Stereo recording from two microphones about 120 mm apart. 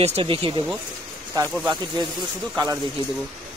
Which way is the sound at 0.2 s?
45° right (ahead or behind).